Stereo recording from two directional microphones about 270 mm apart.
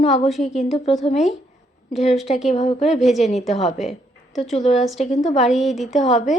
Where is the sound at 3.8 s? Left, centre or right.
Centre.